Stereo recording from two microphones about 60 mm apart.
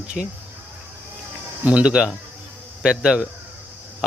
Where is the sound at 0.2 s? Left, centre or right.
Centre.